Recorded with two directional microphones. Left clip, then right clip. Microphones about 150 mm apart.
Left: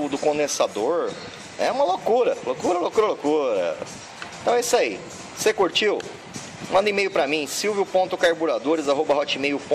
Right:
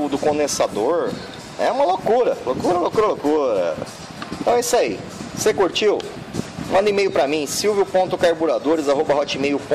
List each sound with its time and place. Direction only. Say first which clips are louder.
0.1 s a man's voice: right 3 dB; 5° right (ahead or behind)